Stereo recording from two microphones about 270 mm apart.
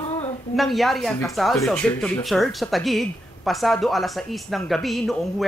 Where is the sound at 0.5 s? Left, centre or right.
Centre.